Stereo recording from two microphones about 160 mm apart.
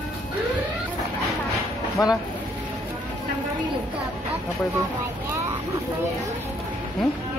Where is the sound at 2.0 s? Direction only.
20° left (ahead or behind).